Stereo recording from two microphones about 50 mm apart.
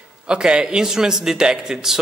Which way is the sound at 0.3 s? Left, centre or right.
Centre.